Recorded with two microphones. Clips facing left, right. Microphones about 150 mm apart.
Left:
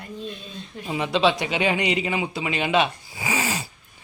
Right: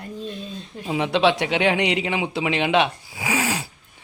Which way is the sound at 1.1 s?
70° right (ahead or behind).